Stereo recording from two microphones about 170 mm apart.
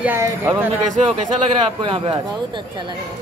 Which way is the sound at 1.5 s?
30° right (ahead or behind).